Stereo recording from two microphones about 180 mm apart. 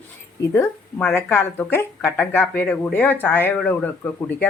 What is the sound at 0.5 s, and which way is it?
Speech, 15° left (ahead or behind).